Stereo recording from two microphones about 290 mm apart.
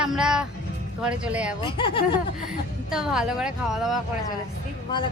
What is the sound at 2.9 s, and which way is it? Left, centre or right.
A woman's voice, centre.